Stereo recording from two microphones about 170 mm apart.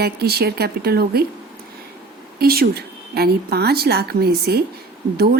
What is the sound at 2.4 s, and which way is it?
A woman's voice, 65° right (ahead or behind).